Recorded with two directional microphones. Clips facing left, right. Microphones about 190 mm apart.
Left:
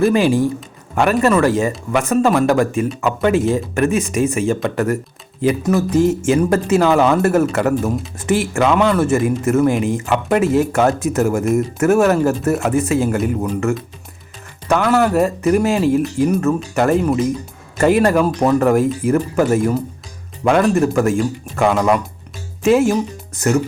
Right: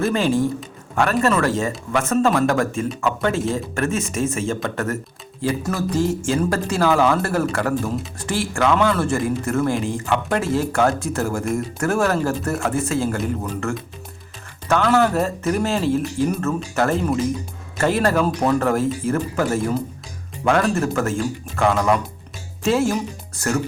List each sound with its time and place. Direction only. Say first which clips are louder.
0.0 s speech: left 5 dB; 15° left (ahead or behind)
20.5 s speech: left 5 dB; 15° left (ahead or behind)